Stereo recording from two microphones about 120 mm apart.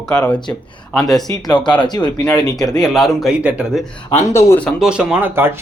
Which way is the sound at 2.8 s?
Centre (ahead or behind).